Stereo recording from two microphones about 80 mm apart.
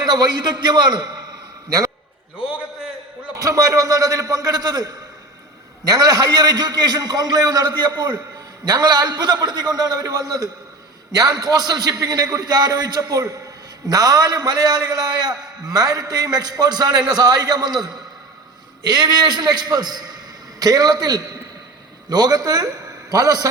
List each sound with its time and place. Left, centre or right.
0.0 s a man's voice: right
3.3 s a man's voice: right